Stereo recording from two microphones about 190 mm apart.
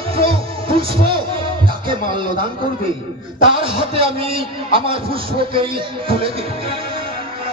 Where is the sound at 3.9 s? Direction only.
30° right (ahead or behind).